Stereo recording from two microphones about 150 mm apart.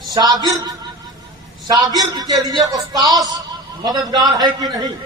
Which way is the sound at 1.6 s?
25° right (ahead or behind).